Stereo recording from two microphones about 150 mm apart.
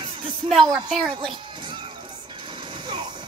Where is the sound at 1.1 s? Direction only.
35° right (ahead or behind).